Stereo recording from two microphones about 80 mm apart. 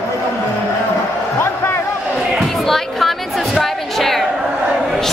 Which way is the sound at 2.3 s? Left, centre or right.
Centre.